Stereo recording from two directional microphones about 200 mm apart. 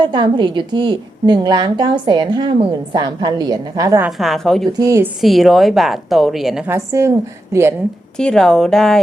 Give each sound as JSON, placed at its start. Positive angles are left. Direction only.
{"t": 0.0, "sound": "a woman's voice", "side_deg": -20}
{"t": 4.2, "sound": "a woman's voice", "side_deg": 0}
{"t": 4.8, "sound": "a woman's voice", "side_deg": -15}
{"t": 5.2, "sound": "a woman's voice", "side_deg": 0}
{"t": 6.7, "sound": "a woman's voice", "side_deg": -15}
{"t": 8.1, "sound": "a woman's voice", "side_deg": 5}